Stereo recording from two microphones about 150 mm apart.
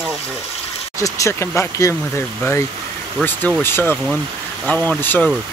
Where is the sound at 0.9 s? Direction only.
20° left (ahead or behind).